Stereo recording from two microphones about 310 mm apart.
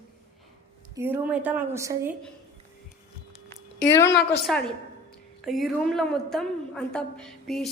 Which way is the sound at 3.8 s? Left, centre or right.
Centre.